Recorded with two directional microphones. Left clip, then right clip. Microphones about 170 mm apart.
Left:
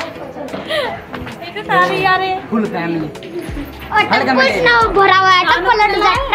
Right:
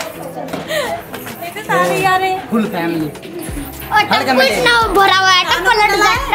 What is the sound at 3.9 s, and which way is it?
A woman's voice, 65° right (ahead or behind).